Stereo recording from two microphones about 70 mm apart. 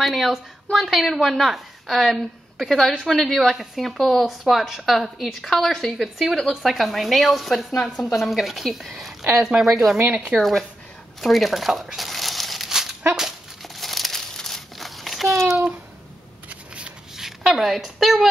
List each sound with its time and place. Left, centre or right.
0.0 s a woman's voice: centre
11.1 s crumpling: centre
16.4 s shuffling cards: centre
17.5 s a woman's voice: centre